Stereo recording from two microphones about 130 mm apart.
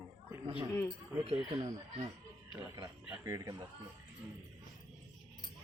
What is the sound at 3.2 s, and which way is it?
Speech, 25° right (ahead or behind).